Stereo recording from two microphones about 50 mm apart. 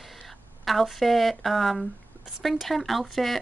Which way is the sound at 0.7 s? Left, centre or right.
Centre.